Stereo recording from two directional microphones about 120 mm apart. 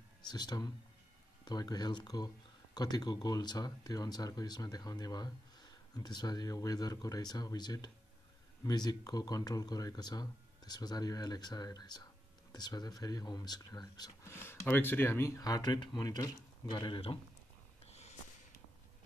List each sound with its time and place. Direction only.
0.3 s speech: 35° left (ahead or behind)
14.2 s speech: 20° left (ahead or behind); by 17.2 s 45° left (ahead or behind)
17.8 s a sound: 60° left (ahead or behind)